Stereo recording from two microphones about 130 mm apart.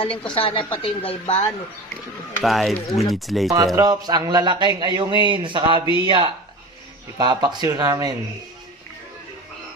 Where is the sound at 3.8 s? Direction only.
30° right (ahead or behind).